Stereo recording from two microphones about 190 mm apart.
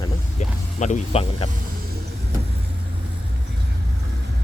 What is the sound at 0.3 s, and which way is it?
Music, 40° left (ahead or behind).